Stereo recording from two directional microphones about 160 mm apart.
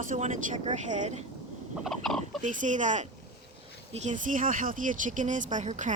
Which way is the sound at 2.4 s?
50° right (ahead or behind).